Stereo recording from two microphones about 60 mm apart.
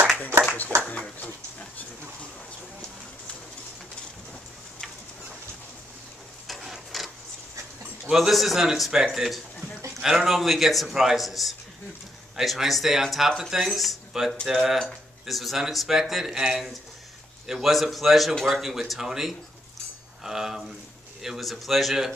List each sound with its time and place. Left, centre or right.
0.8 s speech: left
6.4 s printer: centre
8.0 s a man's voice: centre